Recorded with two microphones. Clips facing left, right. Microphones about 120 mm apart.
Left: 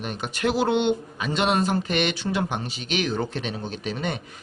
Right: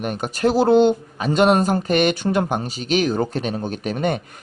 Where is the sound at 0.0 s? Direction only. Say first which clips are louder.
Right 6 dB; 45° right (ahead or behind).